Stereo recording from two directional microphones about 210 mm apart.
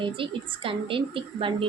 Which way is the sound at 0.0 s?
25° right (ahead or behind).